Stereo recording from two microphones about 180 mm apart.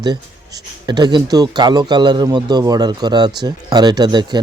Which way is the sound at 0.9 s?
25° right (ahead or behind).